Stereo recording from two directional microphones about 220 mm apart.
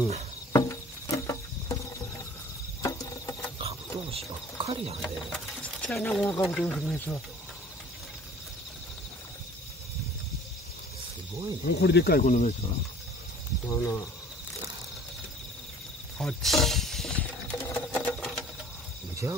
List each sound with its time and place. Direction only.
0.5 s a sound: 15° left (ahead or behind)
2.8 s cricket: 15° left (ahead or behind)
3.5 s wild animals: 25° right (ahead or behind)
4.6 s speech: 30° right (ahead or behind)
5.0 s speech: 5° left (ahead or behind)
11.8 s speech: 45° left (ahead or behind); by 12.7 s 30° left (ahead or behind)
13.7 s speech: 10° left (ahead or behind)
16.2 s a sound: centre (ahead or behind)
19.2 s speech: 10° right (ahead or behind)